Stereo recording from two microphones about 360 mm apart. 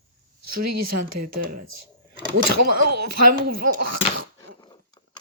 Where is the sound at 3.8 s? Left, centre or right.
Right.